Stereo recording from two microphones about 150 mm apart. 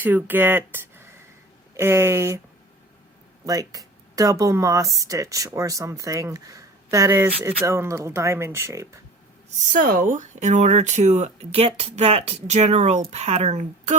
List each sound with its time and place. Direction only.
0.0 s speech: 10° right (ahead or behind)
3.4 s speech: 25° right (ahead or behind)
9.6 s speech: 60° right (ahead or behind)